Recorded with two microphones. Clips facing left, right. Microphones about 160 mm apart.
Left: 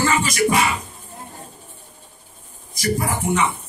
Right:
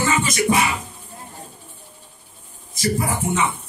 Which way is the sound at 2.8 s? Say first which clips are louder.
Even; 25° right (ahead or behind).